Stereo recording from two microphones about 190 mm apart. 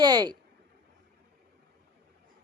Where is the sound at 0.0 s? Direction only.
20° right (ahead or behind).